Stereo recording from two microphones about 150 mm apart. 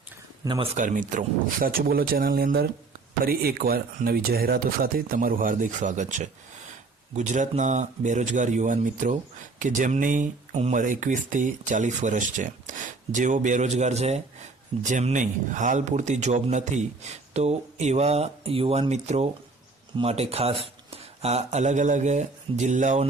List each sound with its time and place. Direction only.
0.4 s speech: 30° right (ahead or behind)
0.7 s a man's voice: 55° right (ahead or behind)